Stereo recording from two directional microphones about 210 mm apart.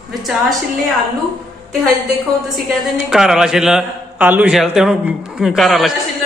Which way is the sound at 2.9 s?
5° right (ahead or behind).